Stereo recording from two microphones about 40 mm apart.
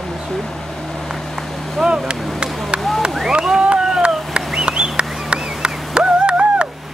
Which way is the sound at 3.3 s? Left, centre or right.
Right.